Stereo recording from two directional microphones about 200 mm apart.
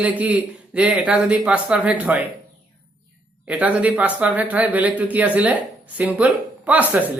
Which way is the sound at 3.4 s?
5° right (ahead or behind).